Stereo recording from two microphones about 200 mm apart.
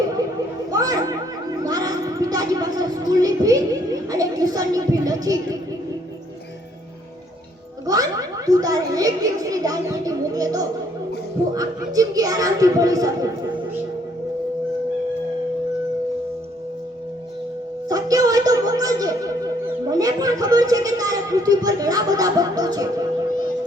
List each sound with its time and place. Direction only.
0.7 s chatter: 20° right (ahead or behind)
1.6 s a sound: 20° right (ahead or behind)
7.9 s speech: 20° right (ahead or behind)
17.8 s speech: 20° right (ahead or behind)